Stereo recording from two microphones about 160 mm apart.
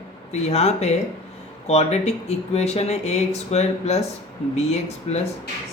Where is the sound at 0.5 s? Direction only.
40° left (ahead or behind).